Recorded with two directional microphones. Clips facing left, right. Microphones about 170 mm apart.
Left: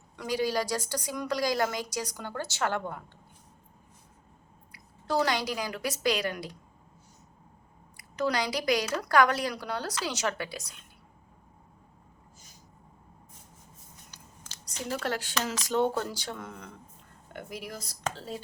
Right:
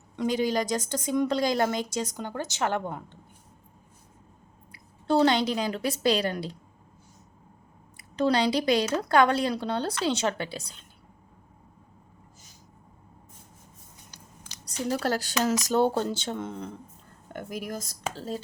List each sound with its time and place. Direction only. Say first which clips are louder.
0.2 s a woman's voice: right 3 dB; 20° right (ahead or behind)
4.7 s a woman's voice: right 5 dB; 25° right (ahead or behind)
7.9 s a woman's voice: right 5 dB; 30° right (ahead or behind)
14.1 s a sound: right 3 dB; 15° right (ahead or behind)
14.6 s a woman's voice: right 5 dB; 35° right (ahead or behind)
17.3 s speech: right 5 dB; 45° right (ahead or behind)